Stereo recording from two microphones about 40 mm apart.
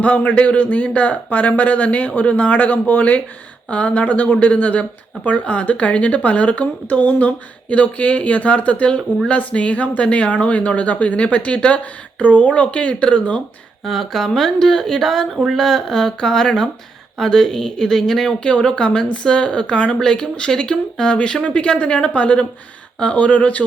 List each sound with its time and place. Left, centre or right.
0.0 s speech: left
3.7 s speech: left
9.1 s speech: left
9.5 s speech: left
13.8 s speech: centre; by 23.6 s left